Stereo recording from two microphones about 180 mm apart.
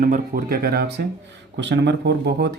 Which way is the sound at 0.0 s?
50° right (ahead or behind).